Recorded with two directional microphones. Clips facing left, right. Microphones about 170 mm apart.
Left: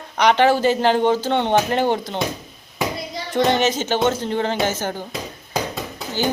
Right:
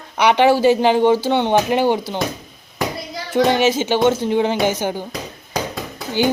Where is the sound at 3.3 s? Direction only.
5° right (ahead or behind).